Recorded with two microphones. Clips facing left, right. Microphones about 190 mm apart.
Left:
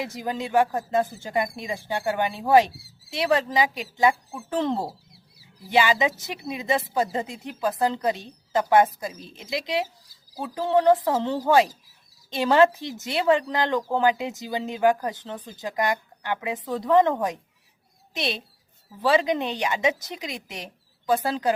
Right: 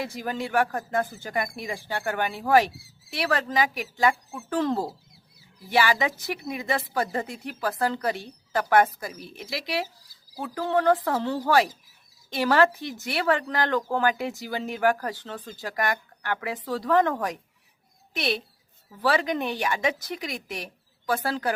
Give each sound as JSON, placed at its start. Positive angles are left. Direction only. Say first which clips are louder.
{"t": 0.0, "sound": "speech", "louder": "left 1 dB", "side_deg": 20}